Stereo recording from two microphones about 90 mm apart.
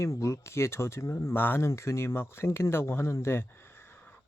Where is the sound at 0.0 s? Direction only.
35° left (ahead or behind).